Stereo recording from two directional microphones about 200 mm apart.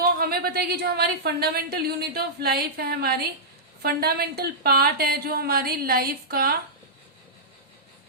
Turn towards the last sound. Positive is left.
turn(degrees=-50)  # may be behind; listen again after turning